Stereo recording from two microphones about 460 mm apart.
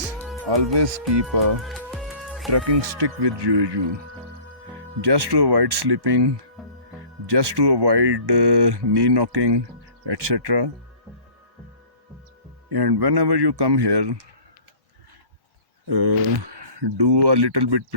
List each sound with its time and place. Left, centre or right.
0.4 s speech: right
1.6 s music: centre
2.5 s speech: right
4.9 s speech: right
12.6 s speech: right
15.9 s speech: right